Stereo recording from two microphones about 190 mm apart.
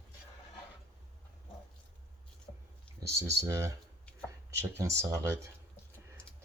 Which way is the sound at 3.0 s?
15° right (ahead or behind).